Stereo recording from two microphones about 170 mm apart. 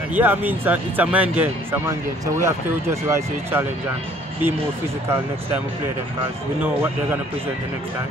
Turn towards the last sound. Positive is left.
turn(degrees=-15)  # may be behind; listen again after turning